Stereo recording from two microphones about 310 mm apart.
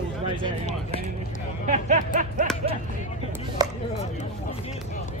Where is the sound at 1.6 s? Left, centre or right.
Right.